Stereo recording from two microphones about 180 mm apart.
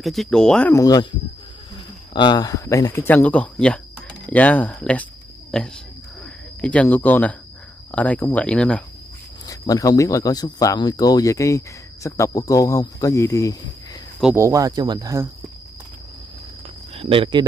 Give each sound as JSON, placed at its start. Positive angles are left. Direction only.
{"t": 0.0, "sound": "speech", "side_deg": 0}
{"t": 0.7, "sound": "speech", "side_deg": 20}
{"t": 2.1, "sound": "speech", "side_deg": 25}
{"t": 9.5, "sound": "speech", "side_deg": 20}
{"t": 14.3, "sound": "speech", "side_deg": -15}
{"t": 16.9, "sound": "speech", "side_deg": -30}